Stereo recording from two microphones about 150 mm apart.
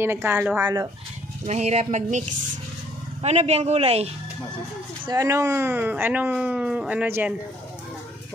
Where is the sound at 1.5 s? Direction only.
45° right (ahead or behind).